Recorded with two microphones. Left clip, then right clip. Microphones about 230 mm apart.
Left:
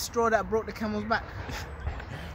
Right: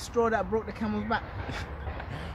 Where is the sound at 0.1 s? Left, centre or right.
Left.